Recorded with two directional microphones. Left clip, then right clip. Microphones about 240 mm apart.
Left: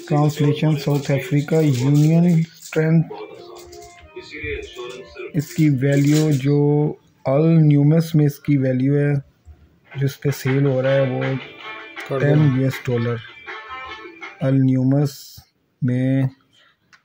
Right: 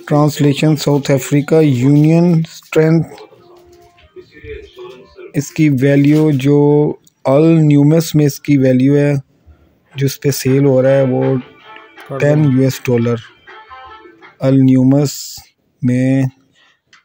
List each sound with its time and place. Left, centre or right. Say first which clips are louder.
0.0 s speech: right 7 dB; right
5.3 s speech: right 6 dB; right
12.6 s speech: right 8 dB; right
14.4 s speech: right 8 dB; right